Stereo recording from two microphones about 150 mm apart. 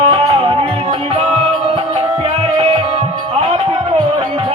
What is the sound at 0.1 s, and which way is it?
Music, 35° right (ahead or behind).